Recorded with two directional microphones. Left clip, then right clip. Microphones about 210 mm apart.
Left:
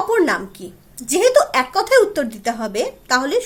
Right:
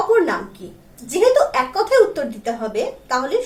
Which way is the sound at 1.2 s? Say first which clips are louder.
Even; 50° left (ahead or behind).